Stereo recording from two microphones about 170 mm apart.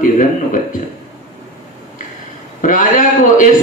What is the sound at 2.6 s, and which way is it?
Speech, 50° left (ahead or behind).